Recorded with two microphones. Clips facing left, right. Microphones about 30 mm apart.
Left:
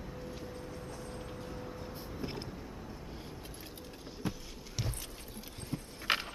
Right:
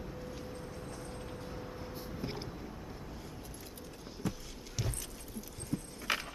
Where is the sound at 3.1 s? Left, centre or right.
Left.